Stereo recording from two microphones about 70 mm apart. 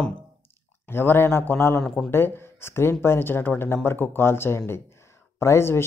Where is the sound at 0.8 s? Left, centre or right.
Left.